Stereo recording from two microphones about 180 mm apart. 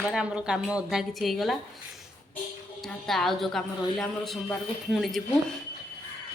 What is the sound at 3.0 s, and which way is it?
A woman's voice, centre (ahead or behind).